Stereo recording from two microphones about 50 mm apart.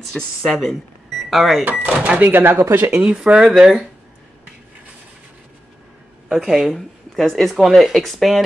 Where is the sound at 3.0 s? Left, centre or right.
Right.